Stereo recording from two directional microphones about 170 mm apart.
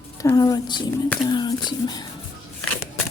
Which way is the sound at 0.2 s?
20° left (ahead or behind).